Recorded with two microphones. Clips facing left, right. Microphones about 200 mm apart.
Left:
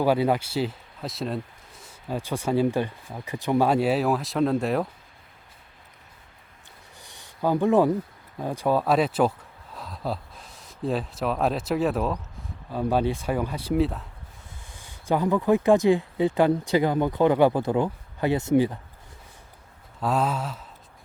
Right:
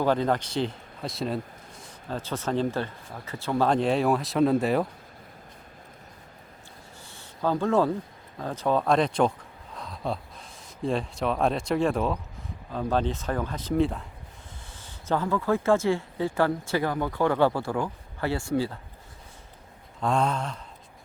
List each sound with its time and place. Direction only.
0.0 s speech: 10° left (ahead or behind)
2.0 s speech: 10° left (ahead or behind)
7.0 s a sound: 15° left (ahead or behind)
8.4 s speech: 10° left (ahead or behind)
9.7 s gasp: 5° left (ahead or behind)
10.8 s speech: 5° left (ahead or behind)
15.0 s speech: 15° left (ahead or behind)
20.0 s speech: 5° left (ahead or behind)